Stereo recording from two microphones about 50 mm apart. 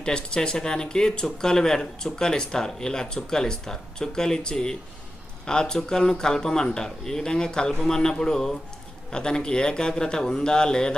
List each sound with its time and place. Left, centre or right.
0.0 s speech: centre